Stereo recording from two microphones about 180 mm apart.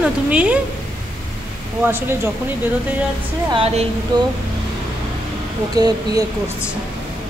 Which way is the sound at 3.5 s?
35° right (ahead or behind).